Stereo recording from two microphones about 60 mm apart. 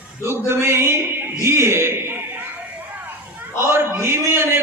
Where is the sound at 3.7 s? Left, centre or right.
Right.